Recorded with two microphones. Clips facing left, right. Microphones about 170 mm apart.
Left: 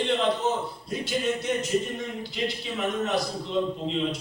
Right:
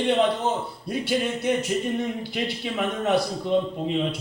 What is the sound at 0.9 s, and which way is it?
A man's voice, 55° right (ahead or behind).